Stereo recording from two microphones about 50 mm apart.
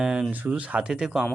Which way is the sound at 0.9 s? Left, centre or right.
Centre.